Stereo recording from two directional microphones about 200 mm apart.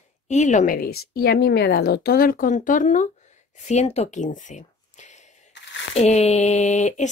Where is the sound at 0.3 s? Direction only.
35° left (ahead or behind).